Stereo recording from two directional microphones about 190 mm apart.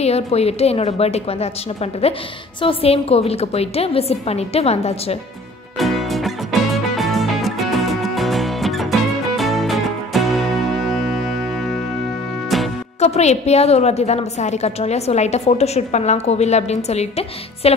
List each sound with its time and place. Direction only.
0.0 s a woman's voice: 35° left (ahead or behind)
5.8 s music: centre (ahead or behind)
13.0 s a woman's voice: 35° left (ahead or behind)